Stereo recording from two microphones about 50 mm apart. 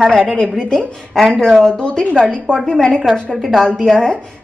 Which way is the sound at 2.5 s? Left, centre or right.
Centre.